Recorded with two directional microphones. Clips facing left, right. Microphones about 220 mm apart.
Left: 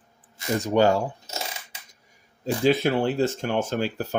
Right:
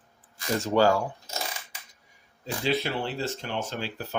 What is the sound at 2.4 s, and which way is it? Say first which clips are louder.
Speech: left 7 dB; 45° left (ahead or behind).